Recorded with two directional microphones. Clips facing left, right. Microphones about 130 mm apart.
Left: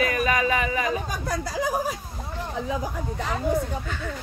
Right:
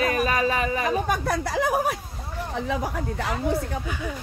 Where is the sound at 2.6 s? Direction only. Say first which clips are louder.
Right 3 dB; 75° right (ahead or behind).